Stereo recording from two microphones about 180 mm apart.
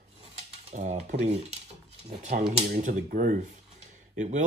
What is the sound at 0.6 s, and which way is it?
Cutlery, 40° right (ahead or behind).